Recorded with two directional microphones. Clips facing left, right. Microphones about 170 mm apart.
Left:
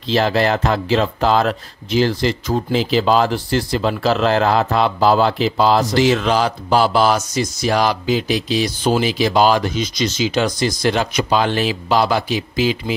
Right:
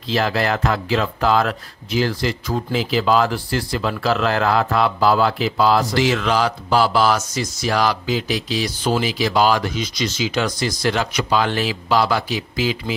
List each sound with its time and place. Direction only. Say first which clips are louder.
0.1 s speech: left 4 dB; 25° left (ahead or behind)